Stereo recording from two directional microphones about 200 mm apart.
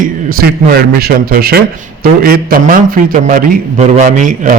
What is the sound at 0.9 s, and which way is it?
A man's voice, 50° right (ahead or behind).